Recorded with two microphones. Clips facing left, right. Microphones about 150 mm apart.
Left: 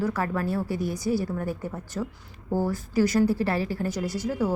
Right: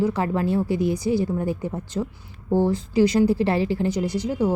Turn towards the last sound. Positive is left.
turn(degrees=-20)  # may be behind; listen again after turning